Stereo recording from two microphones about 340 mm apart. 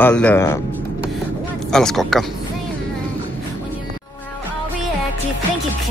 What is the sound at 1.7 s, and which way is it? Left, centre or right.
Speech, centre.